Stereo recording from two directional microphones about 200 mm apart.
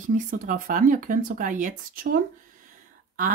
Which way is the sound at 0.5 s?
40° right (ahead or behind).